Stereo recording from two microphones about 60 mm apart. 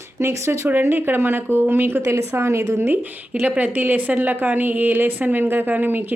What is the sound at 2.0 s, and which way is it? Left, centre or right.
Speech, right.